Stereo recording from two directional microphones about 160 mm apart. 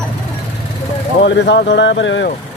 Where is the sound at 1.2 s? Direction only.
90° left.